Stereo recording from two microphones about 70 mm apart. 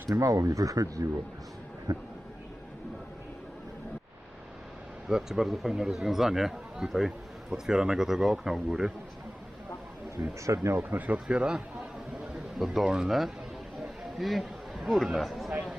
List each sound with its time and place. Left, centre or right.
0.1 s speech: right
5.0 s speech: centre
10.2 s speech: right
10.8 s a man's voice: right; by 15.5 s centre